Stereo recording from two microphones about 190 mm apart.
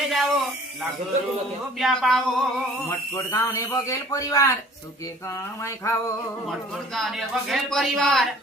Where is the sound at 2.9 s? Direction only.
15° left (ahead or behind).